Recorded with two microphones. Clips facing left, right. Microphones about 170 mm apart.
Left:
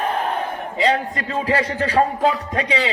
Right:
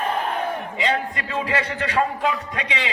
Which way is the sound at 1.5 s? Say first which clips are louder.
Left 7 dB; 35° left (ahead or behind).